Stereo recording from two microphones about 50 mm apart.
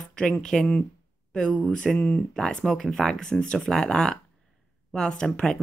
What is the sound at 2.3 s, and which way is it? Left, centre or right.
A woman's voice, centre.